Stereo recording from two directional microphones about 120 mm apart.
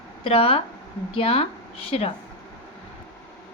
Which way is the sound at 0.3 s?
50° left (ahead or behind).